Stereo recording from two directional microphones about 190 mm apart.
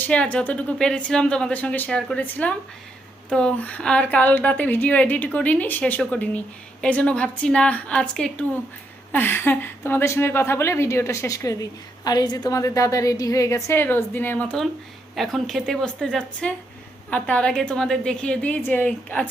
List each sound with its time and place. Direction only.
0.0 s a woman's voice: 5° left (ahead or behind)